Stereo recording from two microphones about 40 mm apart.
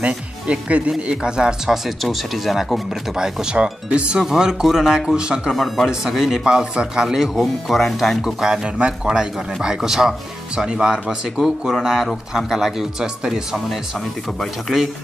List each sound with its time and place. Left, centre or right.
0.0 s speech: right
1.7 s speech: centre
3.2 s speech: right
4.2 s a man's voice: centre
5.5 s speech: centre
5.9 s a man's voice: centre
6.4 s speech: right
7.3 s a man's voice: centre
8.7 s a man's voice: right